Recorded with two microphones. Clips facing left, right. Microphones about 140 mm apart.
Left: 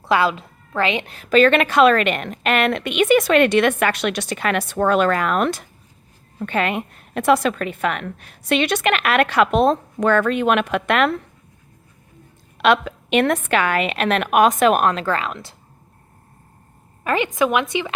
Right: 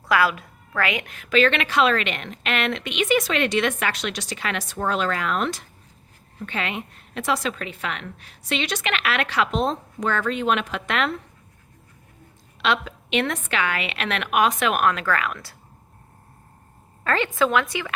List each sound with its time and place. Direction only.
0.0 s a woman's voice: 25° left (ahead or behind); by 11.1 s 55° left (ahead or behind)
12.5 s a woman's voice: 55° left (ahead or behind); by 15.5 s 20° left (ahead or behind)
17.0 s a woman's voice: 15° left (ahead or behind)